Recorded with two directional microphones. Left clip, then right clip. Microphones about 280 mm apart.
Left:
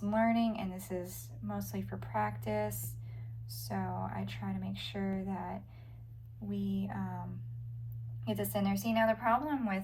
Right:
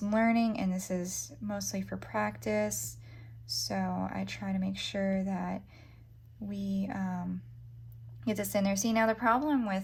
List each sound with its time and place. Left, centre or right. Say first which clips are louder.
0.1 s speech: right 2 dB; right
3.5 s speech: right 6 dB; right
5.0 s speech: right 6 dB; right
6.5 s speech: right 2 dB; right
8.4 s speech: right 5 dB; right